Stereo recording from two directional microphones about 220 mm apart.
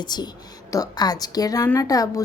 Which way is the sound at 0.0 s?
20° left (ahead or behind).